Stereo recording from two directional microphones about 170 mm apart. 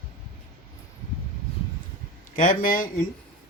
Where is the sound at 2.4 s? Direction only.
50° left (ahead or behind).